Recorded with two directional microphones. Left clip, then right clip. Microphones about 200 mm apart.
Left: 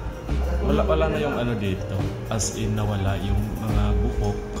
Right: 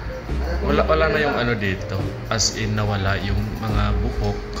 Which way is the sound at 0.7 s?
5° left (ahead or behind).